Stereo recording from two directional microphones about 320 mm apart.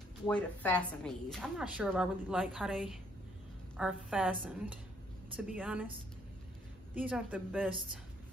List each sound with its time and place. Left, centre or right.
0.3 s a woman's voice: centre
7.0 s a woman's voice: centre